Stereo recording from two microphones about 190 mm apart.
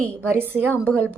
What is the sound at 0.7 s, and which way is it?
Speech, 5° left (ahead or behind).